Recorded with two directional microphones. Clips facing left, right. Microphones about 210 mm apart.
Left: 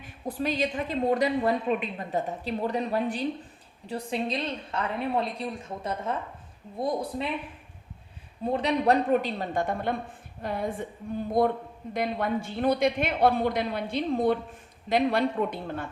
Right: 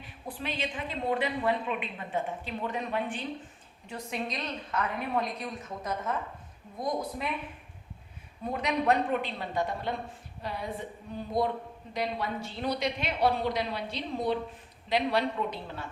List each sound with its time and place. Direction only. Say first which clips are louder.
0.3 s a woman's voice: left 7 dB; 40° left (ahead or behind)
8.4 s a woman's voice: left 4 dB; 30° left (ahead or behind); by 15.9 s 50° left (ahead or behind)